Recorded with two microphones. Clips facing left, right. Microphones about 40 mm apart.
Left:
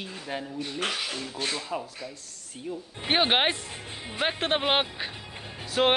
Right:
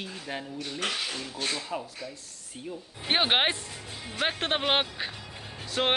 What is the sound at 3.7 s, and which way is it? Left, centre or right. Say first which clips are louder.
Speech: left 2 dB; left.